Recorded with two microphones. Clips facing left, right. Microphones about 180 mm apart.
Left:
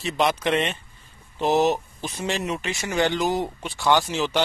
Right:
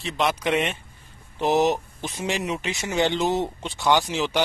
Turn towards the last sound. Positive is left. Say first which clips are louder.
# even
turn(degrees=-15)  # may be behind; listen again after turning